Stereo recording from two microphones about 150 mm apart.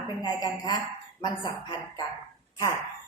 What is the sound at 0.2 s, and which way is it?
A woman's voice, 25° left (ahead or behind).